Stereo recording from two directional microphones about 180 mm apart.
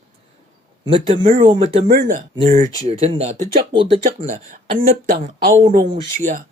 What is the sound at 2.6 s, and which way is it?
Speech, 40° right (ahead or behind).